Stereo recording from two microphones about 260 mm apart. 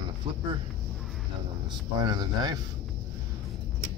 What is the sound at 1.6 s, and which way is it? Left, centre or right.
Speech, centre.